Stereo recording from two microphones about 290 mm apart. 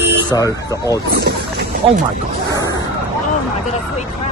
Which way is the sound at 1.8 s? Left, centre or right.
Centre.